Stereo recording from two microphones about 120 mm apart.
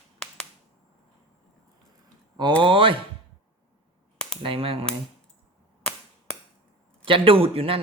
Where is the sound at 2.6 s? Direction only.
45° right (ahead or behind).